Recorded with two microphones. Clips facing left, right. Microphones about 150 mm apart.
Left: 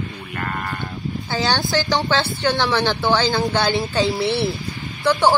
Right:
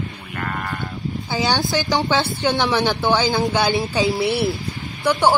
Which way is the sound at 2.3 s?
15° right (ahead or behind).